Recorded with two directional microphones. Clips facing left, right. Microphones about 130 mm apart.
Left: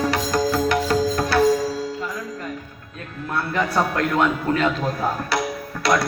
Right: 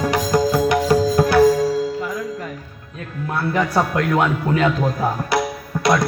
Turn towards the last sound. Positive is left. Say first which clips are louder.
# right 2 dB
turn(degrees=-15)  # may be behind; listen again after turning